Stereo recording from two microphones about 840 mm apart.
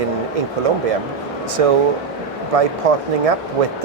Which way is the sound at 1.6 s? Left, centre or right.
Right.